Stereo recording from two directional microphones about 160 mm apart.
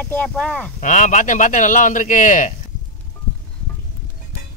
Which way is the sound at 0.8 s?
50° left (ahead or behind).